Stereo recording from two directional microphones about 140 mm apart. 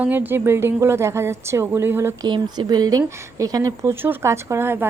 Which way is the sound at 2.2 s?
35° right (ahead or behind).